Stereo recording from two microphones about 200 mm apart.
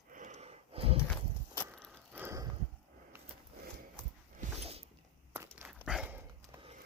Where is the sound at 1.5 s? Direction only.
5° left (ahead or behind).